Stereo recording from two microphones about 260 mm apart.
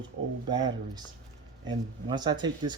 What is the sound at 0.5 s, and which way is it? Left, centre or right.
Speech, centre.